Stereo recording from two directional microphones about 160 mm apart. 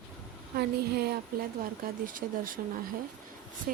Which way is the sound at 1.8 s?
60° right (ahead or behind).